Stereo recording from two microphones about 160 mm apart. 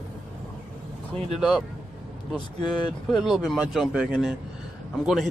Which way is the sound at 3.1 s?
Centre (ahead or behind).